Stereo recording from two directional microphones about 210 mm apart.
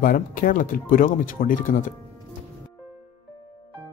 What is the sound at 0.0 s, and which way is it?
Speech, 40° left (ahead or behind).